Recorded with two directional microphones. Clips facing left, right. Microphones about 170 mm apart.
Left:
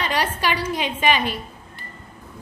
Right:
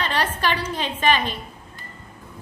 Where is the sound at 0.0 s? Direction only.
10° left (ahead or behind).